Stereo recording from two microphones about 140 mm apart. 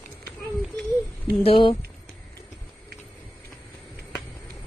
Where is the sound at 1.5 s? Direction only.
40° left (ahead or behind).